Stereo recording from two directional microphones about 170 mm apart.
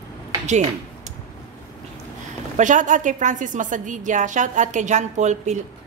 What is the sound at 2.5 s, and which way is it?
A woman's voice, 45° right (ahead or behind).